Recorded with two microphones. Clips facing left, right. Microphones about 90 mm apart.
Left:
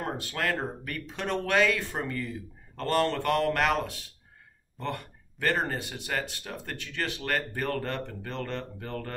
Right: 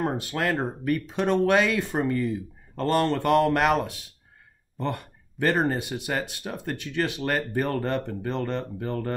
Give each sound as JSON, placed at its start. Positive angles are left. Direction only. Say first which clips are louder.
{"t": 0.2, "sound": "speech", "louder": "right 4 dB", "side_deg": -20}